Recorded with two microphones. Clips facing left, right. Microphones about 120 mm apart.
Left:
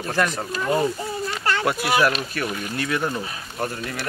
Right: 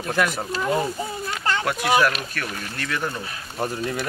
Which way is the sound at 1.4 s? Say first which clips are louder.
Even; 20° right (ahead or behind).